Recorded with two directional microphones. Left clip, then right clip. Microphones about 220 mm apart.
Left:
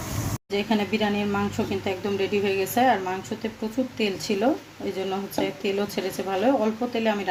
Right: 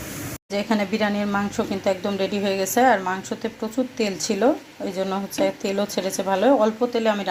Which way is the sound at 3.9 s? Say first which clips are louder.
Even; 5° right (ahead or behind).